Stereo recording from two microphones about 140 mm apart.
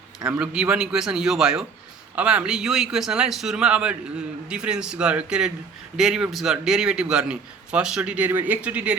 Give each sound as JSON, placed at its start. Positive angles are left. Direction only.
{"t": 0.3, "sound": "a man's voice", "side_deg": -5}